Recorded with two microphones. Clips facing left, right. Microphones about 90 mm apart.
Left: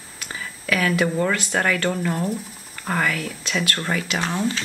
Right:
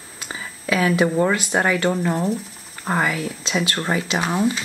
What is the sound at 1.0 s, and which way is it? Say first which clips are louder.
Speech: right 3 dB; 20° right (ahead or behind).